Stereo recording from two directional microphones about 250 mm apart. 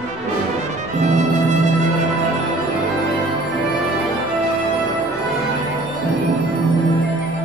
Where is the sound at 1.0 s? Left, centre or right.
Right.